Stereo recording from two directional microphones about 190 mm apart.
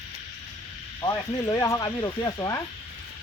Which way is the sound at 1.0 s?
20° left (ahead or behind).